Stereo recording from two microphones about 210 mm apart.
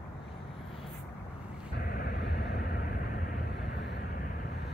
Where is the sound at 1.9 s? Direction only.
45° left (ahead or behind).